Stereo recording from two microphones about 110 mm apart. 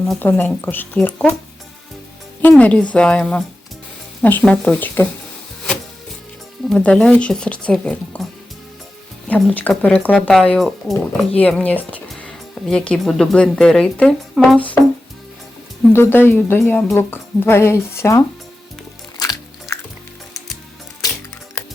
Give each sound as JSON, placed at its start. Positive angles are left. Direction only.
{"t": 0.2, "sound": "speech", "side_deg": 15}
{"t": 2.5, "sound": "speech", "side_deg": 10}
{"t": 6.7, "sound": "speech", "side_deg": 10}
{"t": 11.3, "sound": "speech", "side_deg": 15}
{"t": 15.9, "sound": "a woman's voice", "side_deg": 20}
{"t": 19.2, "sound": "music", "side_deg": 30}